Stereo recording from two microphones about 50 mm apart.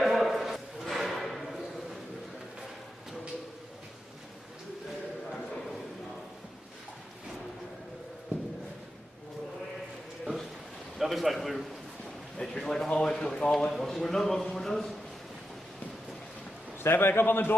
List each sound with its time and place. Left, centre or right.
0.0 s a sound: centre
11.0 s a man's voice: centre
16.8 s a man's voice: left